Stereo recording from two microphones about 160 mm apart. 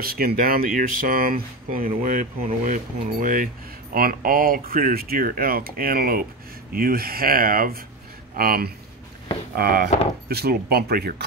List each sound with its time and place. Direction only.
0.0 s speech: 65° right (ahead or behind)